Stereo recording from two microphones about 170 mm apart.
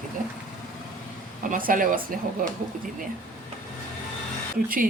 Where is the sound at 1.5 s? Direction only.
55° right (ahead or behind).